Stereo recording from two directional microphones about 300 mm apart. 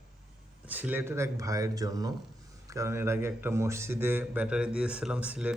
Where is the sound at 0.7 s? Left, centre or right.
Centre.